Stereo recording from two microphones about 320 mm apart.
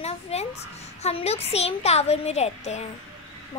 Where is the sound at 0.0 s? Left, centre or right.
Centre.